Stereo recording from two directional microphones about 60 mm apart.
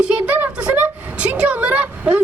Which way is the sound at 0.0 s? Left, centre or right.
Right.